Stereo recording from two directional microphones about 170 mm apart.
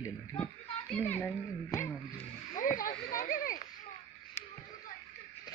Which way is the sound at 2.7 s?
55° left (ahead or behind).